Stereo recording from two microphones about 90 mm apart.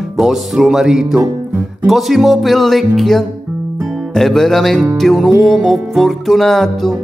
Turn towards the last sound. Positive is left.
turn(degrees=0)  # may be behind; listen again after turning